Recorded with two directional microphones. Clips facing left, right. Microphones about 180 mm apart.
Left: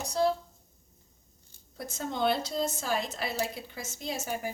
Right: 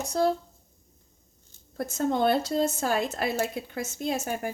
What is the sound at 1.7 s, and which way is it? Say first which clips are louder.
Speech: right 7 dB; 50° right (ahead or behind).